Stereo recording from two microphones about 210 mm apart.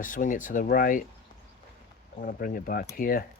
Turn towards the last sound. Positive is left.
turn(degrees=40)  # may be behind; listen again after turning